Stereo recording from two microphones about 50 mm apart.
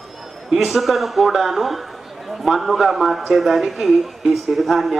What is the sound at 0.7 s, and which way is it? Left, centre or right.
A man's voice, centre.